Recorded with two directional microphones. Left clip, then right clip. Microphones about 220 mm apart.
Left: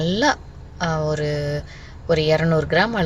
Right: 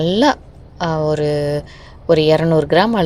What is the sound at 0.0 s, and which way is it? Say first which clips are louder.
Speech: right 5 dB; 30° right (ahead or behind).